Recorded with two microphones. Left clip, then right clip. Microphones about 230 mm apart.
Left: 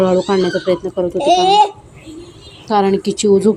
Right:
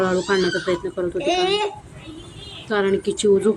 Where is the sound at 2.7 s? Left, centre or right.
Centre.